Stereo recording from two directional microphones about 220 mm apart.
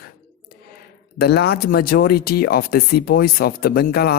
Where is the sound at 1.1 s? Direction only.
45° left (ahead or behind).